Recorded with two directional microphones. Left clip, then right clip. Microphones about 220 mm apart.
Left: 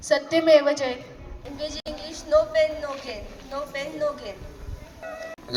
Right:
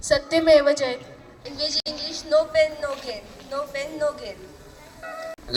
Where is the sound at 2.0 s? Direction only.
20° right (ahead or behind).